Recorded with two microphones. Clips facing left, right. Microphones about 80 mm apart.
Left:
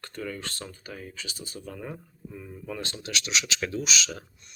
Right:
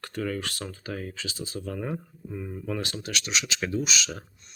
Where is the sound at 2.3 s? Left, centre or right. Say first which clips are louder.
Right 6 dB; right.